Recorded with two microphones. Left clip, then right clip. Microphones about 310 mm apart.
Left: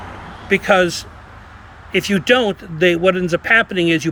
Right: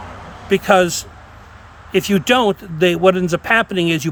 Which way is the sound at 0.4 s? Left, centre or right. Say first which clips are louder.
Right 1 dB; centre.